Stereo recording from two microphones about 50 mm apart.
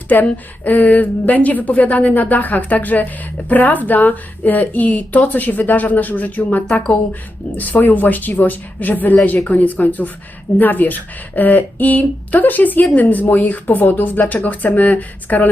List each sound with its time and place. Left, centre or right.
0.1 s a woman's voice: left